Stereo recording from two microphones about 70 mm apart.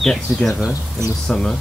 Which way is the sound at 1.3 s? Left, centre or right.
Centre.